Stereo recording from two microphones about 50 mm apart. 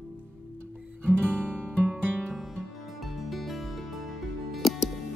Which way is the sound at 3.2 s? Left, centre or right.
Centre.